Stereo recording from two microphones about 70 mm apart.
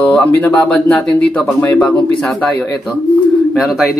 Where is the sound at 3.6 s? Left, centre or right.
Centre.